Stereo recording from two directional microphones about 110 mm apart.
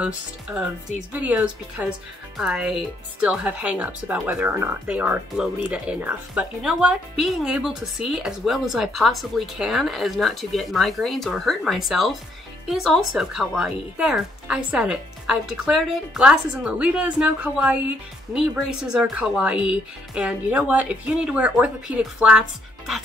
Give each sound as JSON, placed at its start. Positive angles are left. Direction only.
{"t": 0.6, "sound": "speech", "side_deg": -5}